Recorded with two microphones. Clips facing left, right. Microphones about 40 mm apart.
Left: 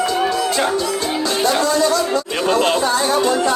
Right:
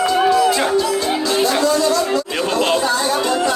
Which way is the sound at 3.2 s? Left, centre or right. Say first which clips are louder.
Left 2 dB; right.